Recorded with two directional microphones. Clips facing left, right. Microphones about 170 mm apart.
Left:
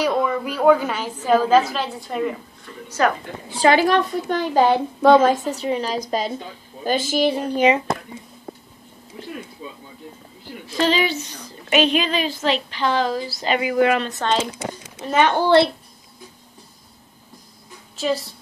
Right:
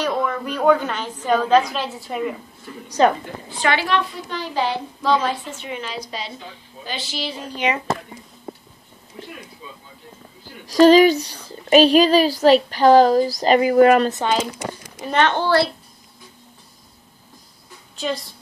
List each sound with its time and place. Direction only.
0.0 s a woman's voice: 10° left (ahead or behind)
3.0 s a woman's voice: 25° right (ahead or behind)
3.6 s a woman's voice: 40° left (ahead or behind)
10.7 s a woman's voice: 45° right (ahead or behind)
15.0 s a woman's voice: 10° left (ahead or behind)
17.9 s a woman's voice: 5° left (ahead or behind)